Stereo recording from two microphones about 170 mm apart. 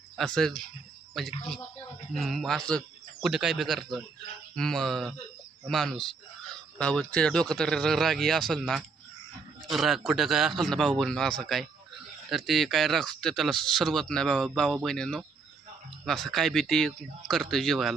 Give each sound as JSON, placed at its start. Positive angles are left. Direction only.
{"t": 0.2, "sound": "speech", "side_deg": 5}